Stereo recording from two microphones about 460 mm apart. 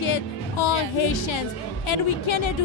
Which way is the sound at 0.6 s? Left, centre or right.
Left.